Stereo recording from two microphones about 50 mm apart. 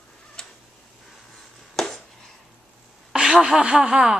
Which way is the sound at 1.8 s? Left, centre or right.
Centre.